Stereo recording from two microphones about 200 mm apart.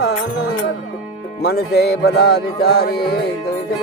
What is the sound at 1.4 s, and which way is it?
Music, 50° left (ahead or behind).